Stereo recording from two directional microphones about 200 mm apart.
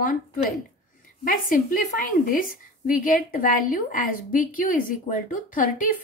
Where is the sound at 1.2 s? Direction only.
45° left (ahead or behind).